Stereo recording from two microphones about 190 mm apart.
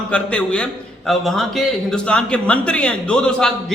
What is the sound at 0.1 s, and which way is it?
A man's voice, 5° left (ahead or behind).